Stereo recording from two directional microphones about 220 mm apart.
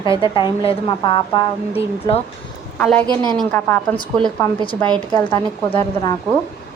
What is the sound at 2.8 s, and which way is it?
A woman's voice, 5° left (ahead or behind).